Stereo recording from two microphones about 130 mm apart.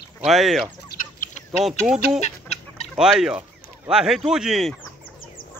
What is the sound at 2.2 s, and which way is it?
Chicken, 60° left (ahead or behind).